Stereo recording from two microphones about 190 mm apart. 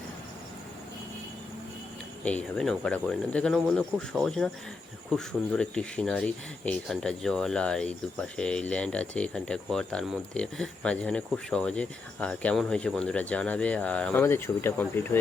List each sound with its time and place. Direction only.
2.2 s speech: 5° left (ahead or behind)